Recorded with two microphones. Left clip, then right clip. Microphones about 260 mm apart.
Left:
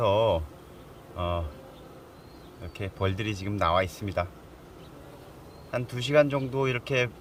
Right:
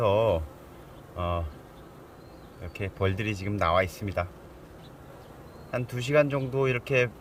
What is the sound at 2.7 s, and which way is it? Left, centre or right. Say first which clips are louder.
Speech: right 1 dB; centre.